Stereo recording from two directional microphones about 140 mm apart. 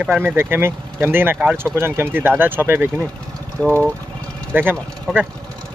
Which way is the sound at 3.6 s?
10° left (ahead or behind).